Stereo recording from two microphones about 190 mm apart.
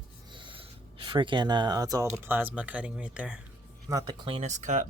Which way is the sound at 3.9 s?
20° right (ahead or behind).